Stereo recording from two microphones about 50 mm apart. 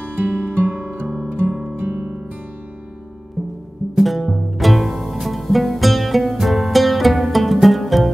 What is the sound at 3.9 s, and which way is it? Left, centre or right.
Music, centre.